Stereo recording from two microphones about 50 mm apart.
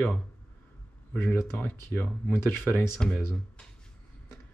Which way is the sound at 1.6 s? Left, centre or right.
Left.